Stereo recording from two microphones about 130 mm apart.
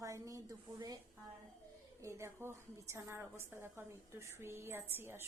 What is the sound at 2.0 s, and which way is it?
A woman's voice, 20° right (ahead or behind).